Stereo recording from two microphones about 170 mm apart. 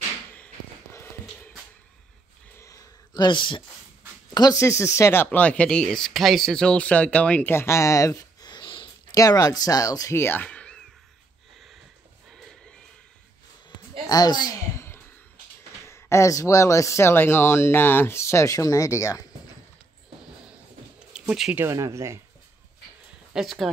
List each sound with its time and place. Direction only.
2.6 s a sound: 20° left (ahead or behind)
4.3 s speech: 20° left (ahead or behind); by 10.8 s 5° left (ahead or behind)
12.3 s horse: centre (ahead or behind)
14.0 s a sound: 25° left (ahead or behind)
15.9 s speech: 15° left (ahead or behind)
21.1 s speech: 5° right (ahead or behind)
21.6 s speech: 15° right (ahead or behind)
23.3 s speech: centre (ahead or behind)